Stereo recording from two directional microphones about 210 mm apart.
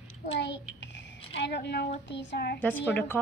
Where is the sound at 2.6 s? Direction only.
10° left (ahead or behind).